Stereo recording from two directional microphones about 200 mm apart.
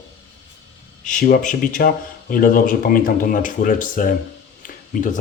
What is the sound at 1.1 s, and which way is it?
Speech, 40° left (ahead or behind).